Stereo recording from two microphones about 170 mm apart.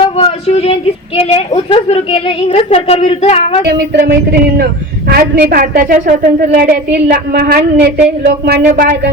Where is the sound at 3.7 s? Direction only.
65° right (ahead or behind).